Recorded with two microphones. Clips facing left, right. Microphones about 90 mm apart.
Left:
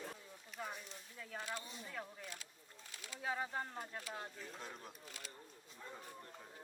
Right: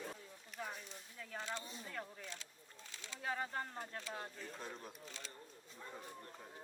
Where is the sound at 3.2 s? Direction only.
5° left (ahead or behind).